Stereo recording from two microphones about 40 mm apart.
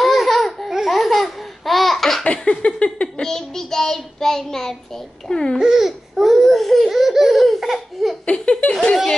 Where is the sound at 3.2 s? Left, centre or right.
Centre.